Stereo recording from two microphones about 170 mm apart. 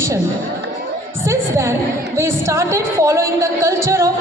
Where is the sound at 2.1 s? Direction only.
15° right (ahead or behind).